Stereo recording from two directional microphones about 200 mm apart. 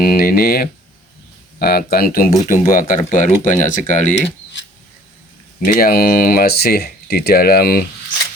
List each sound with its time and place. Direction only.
0.0 s speech: 45° left (ahead or behind)
5.7 s speech: 50° left (ahead or behind)